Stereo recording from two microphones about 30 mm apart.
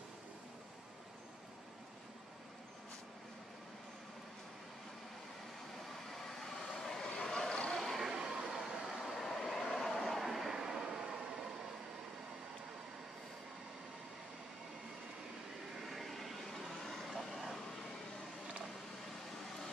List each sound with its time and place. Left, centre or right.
6.1 s train: centre
6.7 s vehicle: centre
7.7 s a sound: centre
8.1 s train: right
8.5 s train: centre
9.2 s vehicle: centre
10.2 s vehicle: centre
10.5 s train: centre
15.9 s vehicle: centre